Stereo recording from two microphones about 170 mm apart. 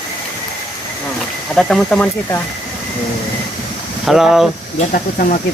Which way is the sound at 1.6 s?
5° left (ahead or behind).